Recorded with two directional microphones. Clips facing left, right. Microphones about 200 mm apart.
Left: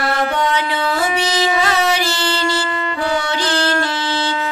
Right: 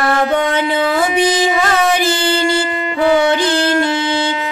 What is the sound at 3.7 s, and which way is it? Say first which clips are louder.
Wind instrument: right 5 dB; 15° right (ahead or behind).